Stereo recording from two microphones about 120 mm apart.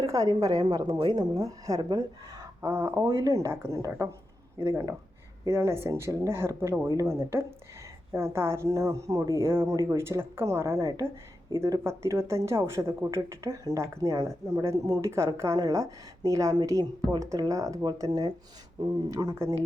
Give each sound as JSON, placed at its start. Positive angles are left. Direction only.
{"t": 0.0, "sound": "speech", "side_deg": -25}